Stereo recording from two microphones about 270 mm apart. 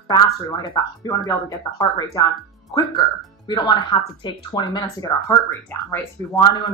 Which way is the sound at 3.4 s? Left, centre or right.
Centre.